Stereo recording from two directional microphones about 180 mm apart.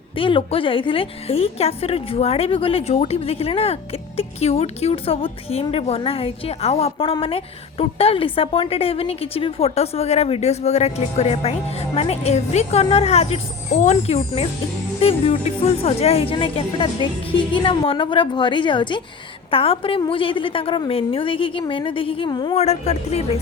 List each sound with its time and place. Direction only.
0.2 s a woman's voice: 30° left (ahead or behind)